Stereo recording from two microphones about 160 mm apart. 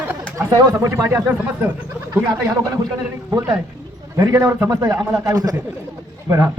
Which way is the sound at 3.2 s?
20° right (ahead or behind).